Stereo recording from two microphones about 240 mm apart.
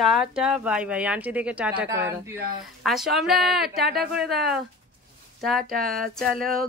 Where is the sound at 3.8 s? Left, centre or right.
Right.